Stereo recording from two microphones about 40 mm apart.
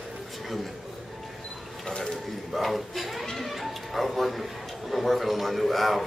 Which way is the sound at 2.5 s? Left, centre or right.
Centre.